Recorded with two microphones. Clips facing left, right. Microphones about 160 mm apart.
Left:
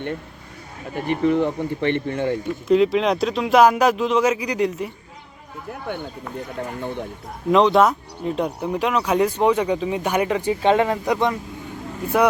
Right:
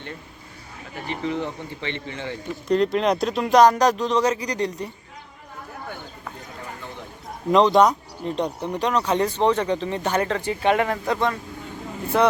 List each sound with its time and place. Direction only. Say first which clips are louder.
0.9 s speech: left 8 dB; 55° left (ahead or behind)
2.6 s speech: left 3 dB; centre (ahead or behind)
6.6 s speech: left 11 dB; 55° left (ahead or behind)
7.5 s speech: left 1 dB; centre (ahead or behind)